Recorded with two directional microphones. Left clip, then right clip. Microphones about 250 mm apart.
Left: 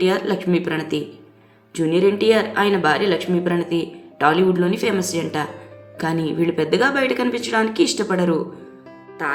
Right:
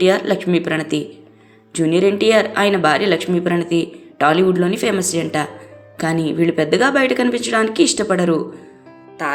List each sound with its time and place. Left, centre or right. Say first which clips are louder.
0.0 s speech: right 4 dB; centre